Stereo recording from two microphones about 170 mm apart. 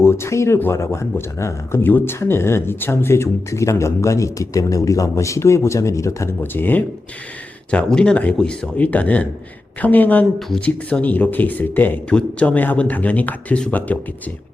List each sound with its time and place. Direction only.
0.0 s speech: 15° left (ahead or behind)